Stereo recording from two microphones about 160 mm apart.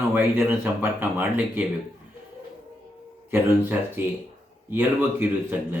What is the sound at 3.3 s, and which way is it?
Speech, 10° right (ahead or behind).